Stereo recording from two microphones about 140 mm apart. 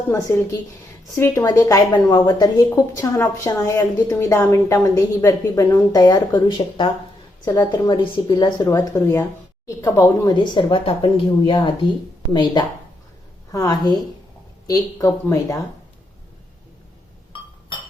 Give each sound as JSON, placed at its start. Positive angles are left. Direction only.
{"t": 0.1, "sound": "a woman's voice", "side_deg": 25}
{"t": 8.9, "sound": "a woman's voice", "side_deg": 15}
{"t": 10.3, "sound": "a woman's voice", "side_deg": 35}